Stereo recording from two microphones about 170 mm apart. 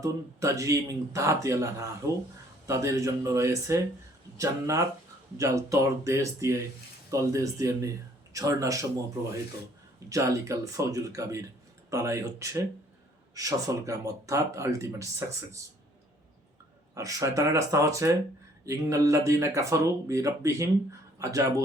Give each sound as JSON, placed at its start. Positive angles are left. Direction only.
{"t": 0.0, "sound": "speech", "side_deg": -20}
{"t": 10.1, "sound": "speech", "side_deg": -20}
{"t": 16.9, "sound": "speech", "side_deg": -20}